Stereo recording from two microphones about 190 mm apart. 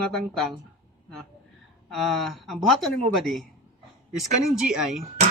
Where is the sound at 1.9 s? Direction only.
Centre (ahead or behind).